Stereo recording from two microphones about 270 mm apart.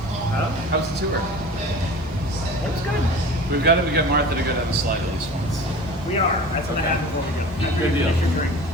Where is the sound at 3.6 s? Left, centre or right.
Right.